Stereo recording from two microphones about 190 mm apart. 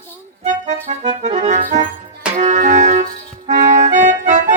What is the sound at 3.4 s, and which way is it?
Accordion, 40° right (ahead or behind).